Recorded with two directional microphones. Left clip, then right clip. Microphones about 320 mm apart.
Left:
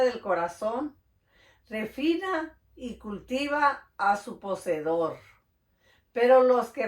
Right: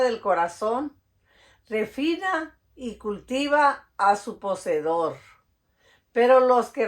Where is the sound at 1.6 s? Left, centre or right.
Right.